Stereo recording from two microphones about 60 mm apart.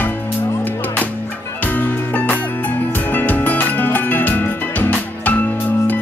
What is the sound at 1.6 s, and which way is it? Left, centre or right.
Music, left.